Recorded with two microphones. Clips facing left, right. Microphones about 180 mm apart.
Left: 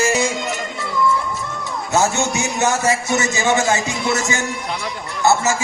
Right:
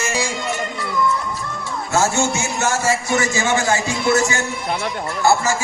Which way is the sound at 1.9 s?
20° left (ahead or behind).